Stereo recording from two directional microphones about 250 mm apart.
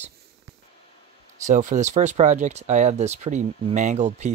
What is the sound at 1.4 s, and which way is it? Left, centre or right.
Speech, right.